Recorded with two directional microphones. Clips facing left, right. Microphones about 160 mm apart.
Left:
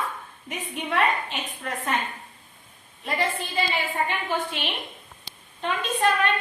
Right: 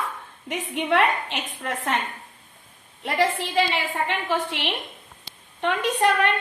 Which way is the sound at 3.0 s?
90° right.